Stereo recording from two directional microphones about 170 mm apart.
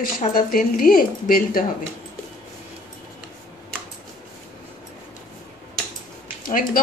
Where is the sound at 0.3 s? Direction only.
55° left (ahead or behind).